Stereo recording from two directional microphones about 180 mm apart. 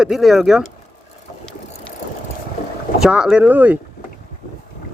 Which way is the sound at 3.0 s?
5° right (ahead or behind).